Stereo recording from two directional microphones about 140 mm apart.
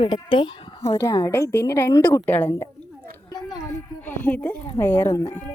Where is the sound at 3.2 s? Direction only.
30° left (ahead or behind).